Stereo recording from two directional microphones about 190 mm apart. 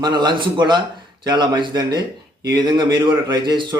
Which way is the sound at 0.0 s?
25° right (ahead or behind).